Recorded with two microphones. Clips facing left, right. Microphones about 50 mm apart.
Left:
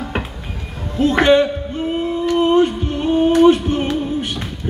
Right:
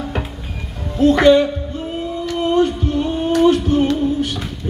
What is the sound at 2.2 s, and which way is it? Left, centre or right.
Singing, left.